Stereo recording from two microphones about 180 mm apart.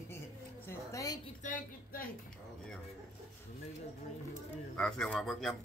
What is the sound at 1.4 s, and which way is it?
Speech, 45° left (ahead or behind).